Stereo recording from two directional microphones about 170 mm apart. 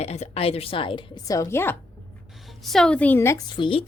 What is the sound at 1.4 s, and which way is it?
Speech, 15° left (ahead or behind).